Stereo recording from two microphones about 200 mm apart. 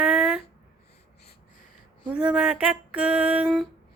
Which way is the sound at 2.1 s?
5° right (ahead or behind).